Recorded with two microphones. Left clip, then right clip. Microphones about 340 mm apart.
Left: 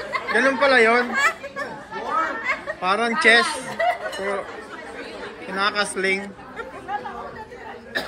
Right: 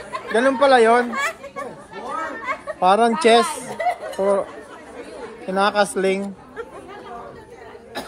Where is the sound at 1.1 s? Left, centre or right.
Right.